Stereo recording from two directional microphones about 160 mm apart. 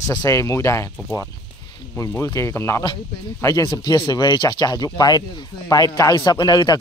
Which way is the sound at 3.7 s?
30° left (ahead or behind).